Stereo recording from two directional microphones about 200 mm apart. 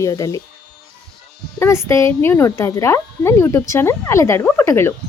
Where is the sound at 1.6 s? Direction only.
15° left (ahead or behind).